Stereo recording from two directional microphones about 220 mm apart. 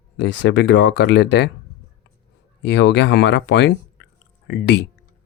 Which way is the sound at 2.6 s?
55° left (ahead or behind).